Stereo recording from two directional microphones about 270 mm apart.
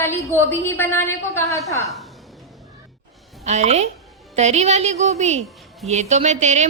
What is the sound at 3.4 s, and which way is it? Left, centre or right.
A woman's voice, right.